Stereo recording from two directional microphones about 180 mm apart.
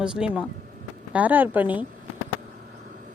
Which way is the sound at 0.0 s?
5° right (ahead or behind).